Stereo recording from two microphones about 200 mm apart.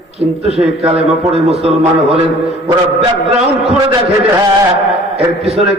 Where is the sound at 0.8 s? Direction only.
30° right (ahead or behind).